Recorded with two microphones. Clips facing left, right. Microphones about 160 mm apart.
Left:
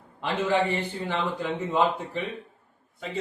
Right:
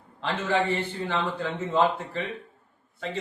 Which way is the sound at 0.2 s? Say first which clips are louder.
Left 1 dB; 15° left (ahead or behind).